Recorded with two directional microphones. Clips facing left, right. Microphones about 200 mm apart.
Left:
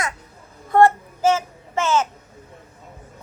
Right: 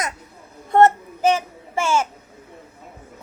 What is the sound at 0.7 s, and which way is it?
Child singing, 20° right (ahead or behind).